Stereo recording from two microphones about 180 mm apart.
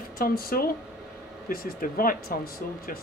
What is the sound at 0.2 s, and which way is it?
Speech, 55° left (ahead or behind).